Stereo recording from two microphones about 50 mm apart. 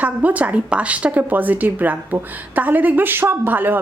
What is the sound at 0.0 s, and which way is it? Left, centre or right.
A woman's voice, right.